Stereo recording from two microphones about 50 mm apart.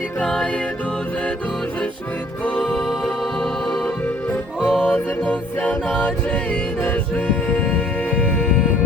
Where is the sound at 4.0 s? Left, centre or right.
Left.